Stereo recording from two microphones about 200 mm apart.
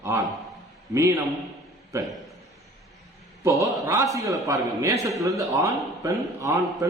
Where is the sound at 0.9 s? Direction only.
15° right (ahead or behind).